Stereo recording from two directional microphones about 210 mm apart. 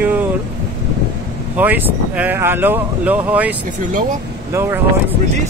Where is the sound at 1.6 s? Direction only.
10° right (ahead or behind).